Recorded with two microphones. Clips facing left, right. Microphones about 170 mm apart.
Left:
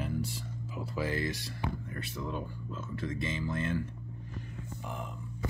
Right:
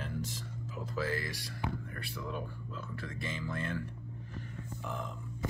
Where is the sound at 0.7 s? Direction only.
15° left (ahead or behind).